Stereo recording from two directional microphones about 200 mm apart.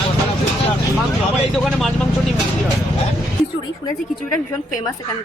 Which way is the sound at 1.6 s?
Centre (ahead or behind).